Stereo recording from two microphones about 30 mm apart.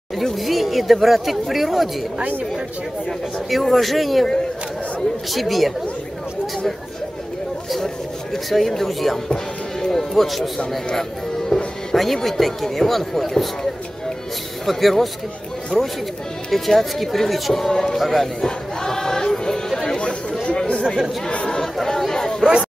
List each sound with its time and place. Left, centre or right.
0.2 s speech: centre
3.7 s speech: centre
5.3 s speech: centre
8.5 s speech: centre
11.0 s speech: centre
14.7 s speech: centre
15.7 s speech: centre
16.4 s speech: centre
17.6 s speech: centre
17.9 s speech: centre
18.8 s choir: centre
19.7 s chatter: centre
20.4 s chatter: left
22.1 s chatter: centre